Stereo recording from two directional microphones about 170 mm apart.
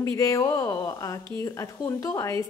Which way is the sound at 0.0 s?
20° left (ahead or behind).